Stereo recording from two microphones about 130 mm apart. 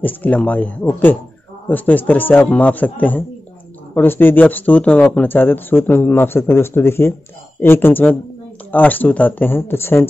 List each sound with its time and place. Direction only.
0.0 s speech: 10° left (ahead or behind)